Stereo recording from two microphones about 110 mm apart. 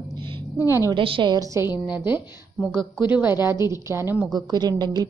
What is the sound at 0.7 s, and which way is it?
Speech, 25° right (ahead or behind).